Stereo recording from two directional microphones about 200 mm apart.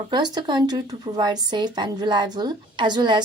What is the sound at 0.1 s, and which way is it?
A woman's voice, 20° right (ahead or behind).